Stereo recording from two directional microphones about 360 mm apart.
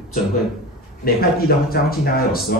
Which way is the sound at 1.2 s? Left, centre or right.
Left.